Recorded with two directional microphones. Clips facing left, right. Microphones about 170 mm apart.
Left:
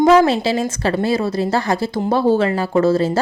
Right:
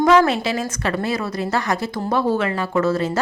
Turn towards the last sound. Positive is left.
turn(degrees=30)  # may be behind; listen again after turning